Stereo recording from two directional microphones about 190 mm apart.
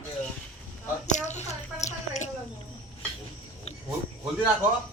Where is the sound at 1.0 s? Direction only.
40° left (ahead or behind).